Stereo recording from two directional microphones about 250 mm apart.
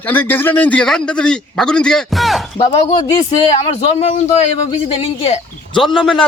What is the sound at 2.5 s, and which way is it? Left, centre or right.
Speech, centre.